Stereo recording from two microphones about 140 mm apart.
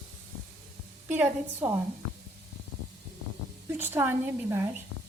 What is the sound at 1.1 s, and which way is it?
Speech, 15° right (ahead or behind).